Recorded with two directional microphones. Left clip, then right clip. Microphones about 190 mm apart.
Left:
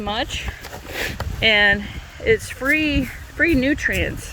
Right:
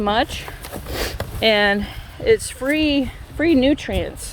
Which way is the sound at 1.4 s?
25° right (ahead or behind).